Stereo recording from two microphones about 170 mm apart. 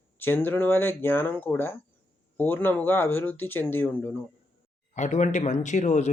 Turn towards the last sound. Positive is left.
turn(degrees=45)  # may be behind; listen again after turning